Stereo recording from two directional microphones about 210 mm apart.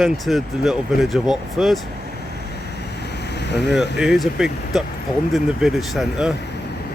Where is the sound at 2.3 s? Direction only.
50° left (ahead or behind).